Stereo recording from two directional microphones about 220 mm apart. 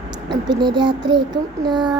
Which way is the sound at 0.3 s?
20° right (ahead or behind).